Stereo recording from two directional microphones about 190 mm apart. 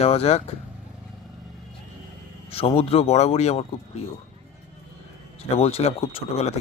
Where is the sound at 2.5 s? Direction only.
30° left (ahead or behind).